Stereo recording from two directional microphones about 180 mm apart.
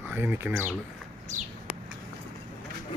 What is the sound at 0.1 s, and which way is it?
Speech, 10° right (ahead or behind).